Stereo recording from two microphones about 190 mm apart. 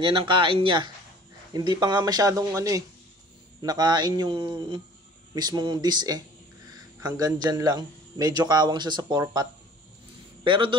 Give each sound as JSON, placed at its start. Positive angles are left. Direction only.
{"t": 0.0, "sound": "speech", "side_deg": -25}